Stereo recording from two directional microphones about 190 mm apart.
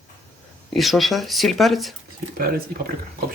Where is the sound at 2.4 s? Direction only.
50° right (ahead or behind).